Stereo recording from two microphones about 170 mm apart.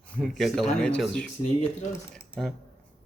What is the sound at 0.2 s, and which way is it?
A man's voice, centre (ahead or behind).